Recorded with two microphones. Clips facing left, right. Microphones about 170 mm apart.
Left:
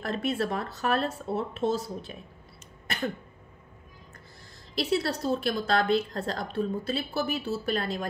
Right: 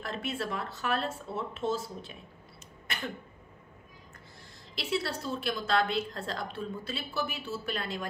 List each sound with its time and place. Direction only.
0.0 s a woman's voice: 40° left (ahead or behind)
2.9 s cough: 40° left (ahead or behind)
4.7 s a woman's voice: 40° left (ahead or behind)